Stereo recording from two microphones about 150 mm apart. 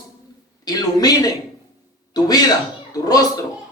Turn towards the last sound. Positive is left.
turn(degrees=25)  # may be behind; listen again after turning